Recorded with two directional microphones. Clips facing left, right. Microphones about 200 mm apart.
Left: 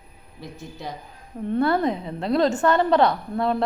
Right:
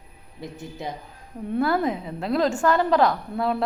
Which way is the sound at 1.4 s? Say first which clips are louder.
Left 2 dB; 5° right (ahead or behind).